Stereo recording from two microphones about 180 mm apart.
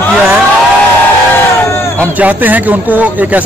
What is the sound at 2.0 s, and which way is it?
A man's voice, 10° right (ahead or behind).